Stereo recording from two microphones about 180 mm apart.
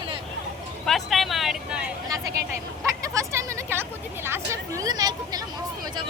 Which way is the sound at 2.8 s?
15° right (ahead or behind).